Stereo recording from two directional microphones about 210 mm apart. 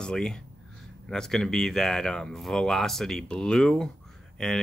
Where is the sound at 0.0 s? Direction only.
5° left (ahead or behind).